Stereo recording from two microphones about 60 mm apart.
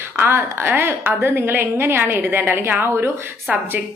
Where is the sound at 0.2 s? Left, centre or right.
Right.